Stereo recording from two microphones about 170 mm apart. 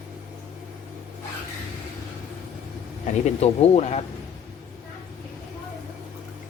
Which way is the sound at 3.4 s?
40° left (ahead or behind).